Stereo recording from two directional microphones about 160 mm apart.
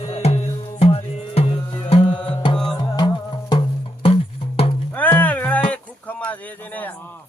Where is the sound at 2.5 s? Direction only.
5° left (ahead or behind).